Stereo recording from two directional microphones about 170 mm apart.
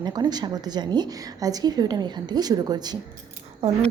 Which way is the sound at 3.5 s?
35° right (ahead or behind).